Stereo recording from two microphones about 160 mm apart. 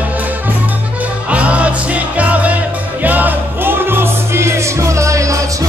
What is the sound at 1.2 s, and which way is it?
Music, 10° right (ahead or behind).